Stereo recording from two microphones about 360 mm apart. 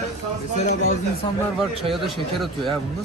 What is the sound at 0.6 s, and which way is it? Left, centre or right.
Speech, centre.